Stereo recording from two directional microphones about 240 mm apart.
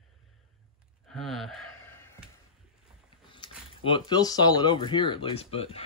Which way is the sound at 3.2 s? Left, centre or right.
Left.